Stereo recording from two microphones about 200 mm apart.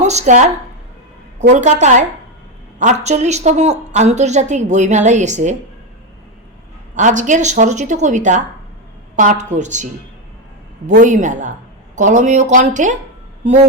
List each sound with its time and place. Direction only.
0.0 s a woman's voice: 35° right (ahead or behind)
2.7 s a woman's voice: 35° right (ahead or behind)
6.9 s a woman's voice: 40° right (ahead or behind)